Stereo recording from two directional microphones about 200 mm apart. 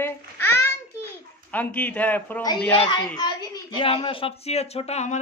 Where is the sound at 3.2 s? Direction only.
20° left (ahead or behind).